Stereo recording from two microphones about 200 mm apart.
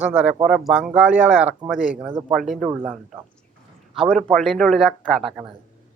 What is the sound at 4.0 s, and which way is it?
Speech, centre (ahead or behind).